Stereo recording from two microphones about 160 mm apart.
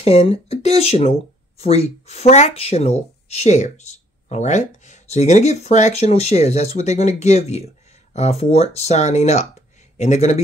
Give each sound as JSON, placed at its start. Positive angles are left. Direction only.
{"t": 0.0, "sound": "speech", "side_deg": 40}